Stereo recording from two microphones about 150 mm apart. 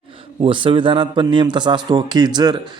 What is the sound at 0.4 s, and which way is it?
Speech, 35° right (ahead or behind).